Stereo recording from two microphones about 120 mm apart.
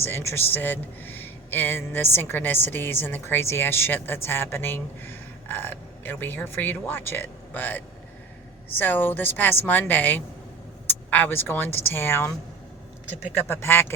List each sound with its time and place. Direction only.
0.0 s a man's voice: 20° left (ahead or behind)
13.5 s speech: 20° left (ahead or behind)